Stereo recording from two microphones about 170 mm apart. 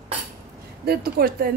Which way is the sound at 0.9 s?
65° right (ahead or behind).